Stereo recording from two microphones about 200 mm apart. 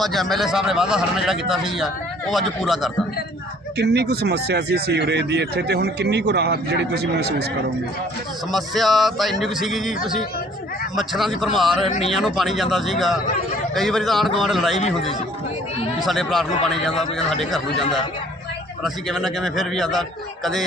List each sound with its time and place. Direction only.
0.0 s a man's voice: centre (ahead or behind)
3.8 s speech: 55° right (ahead or behind)
8.5 s a man's voice: centre (ahead or behind)
11.9 s speech: 35° left (ahead or behind)
12.1 s a man's voice: centre (ahead or behind)
16.0 s a man's voice: centre (ahead or behind)